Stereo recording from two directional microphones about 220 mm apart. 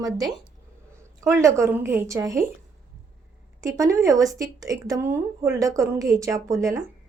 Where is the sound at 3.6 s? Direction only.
15° right (ahead or behind).